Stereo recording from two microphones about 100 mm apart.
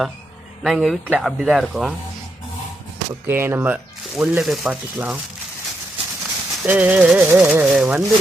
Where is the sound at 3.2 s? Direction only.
20° right (ahead or behind).